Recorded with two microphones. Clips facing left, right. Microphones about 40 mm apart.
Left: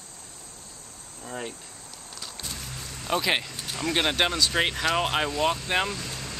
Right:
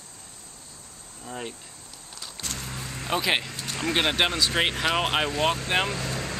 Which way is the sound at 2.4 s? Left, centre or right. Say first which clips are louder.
Right 4 dB; right.